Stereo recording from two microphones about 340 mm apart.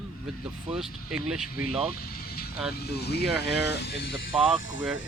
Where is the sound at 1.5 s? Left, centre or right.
Left.